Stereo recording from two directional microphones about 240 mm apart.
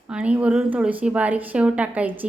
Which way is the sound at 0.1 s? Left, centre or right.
Centre.